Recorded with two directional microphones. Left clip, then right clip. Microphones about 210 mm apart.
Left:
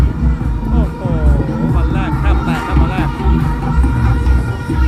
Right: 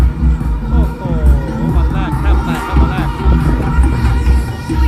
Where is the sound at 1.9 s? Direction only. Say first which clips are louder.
Even; centre (ahead or behind).